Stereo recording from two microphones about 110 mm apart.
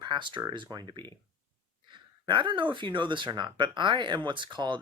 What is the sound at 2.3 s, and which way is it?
Speech, 50° right (ahead or behind).